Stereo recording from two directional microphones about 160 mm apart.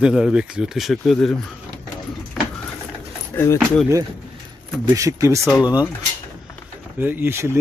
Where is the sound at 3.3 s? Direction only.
20° left (ahead or behind).